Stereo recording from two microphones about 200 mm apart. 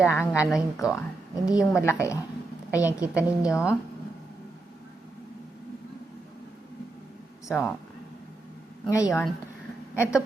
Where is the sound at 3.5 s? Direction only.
15° left (ahead or behind).